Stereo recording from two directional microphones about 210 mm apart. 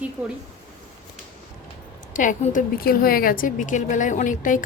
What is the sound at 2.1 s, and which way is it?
A woman's voice, 35° left (ahead or behind).